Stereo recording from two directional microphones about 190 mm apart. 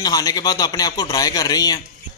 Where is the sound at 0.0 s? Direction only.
20° left (ahead or behind).